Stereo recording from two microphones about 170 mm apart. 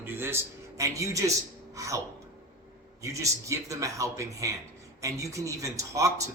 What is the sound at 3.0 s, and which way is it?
A man's voice, 20° right (ahead or behind).